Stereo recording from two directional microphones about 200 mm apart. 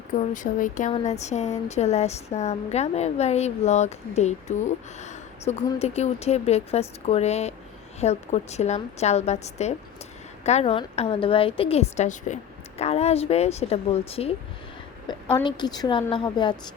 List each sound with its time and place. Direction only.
0.2 s a woman's voice: 40° left (ahead or behind); by 16.6 s 20° left (ahead or behind)